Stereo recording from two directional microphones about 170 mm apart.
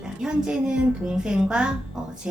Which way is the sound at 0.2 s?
5° right (ahead or behind).